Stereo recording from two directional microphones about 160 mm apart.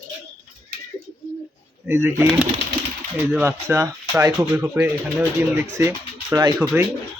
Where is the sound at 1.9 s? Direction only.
15° right (ahead or behind).